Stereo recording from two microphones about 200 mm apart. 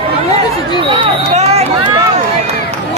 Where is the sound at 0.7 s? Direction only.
25° right (ahead or behind).